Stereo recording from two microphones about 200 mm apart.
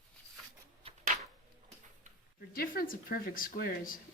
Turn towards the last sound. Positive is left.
turn(degrees=45)  # may be behind; listen again after turning